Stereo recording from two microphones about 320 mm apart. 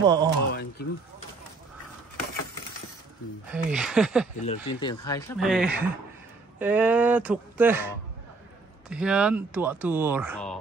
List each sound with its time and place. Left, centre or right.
0.0 s speech: centre
0.5 s speech: left
3.4 s speech: centre
4.5 s speech: centre
5.4 s speech: centre